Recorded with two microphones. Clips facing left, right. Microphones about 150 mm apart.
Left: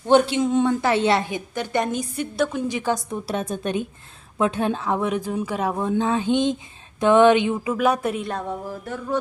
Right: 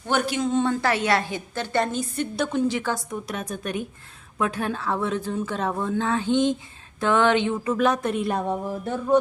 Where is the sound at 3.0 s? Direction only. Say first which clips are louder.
Left 4 dB; 30° left (ahead or behind); by 8.3 s centre (ahead or behind).